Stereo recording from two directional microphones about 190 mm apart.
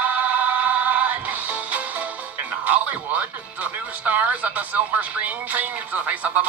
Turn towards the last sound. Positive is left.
turn(degrees=-10)  # may be behind; listen again after turning